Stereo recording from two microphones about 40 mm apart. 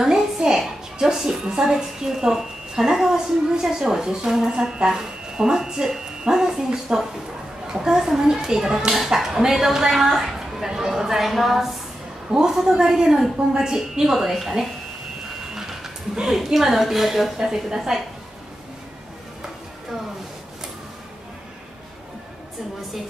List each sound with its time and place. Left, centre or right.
0.0 s a sound: centre
0.9 s a woman's voice: centre
8.9 s a woman's voice: centre
12.3 s a woman's voice: centre
14.1 s a woman's voice: centre
15.5 s a woman's voice: centre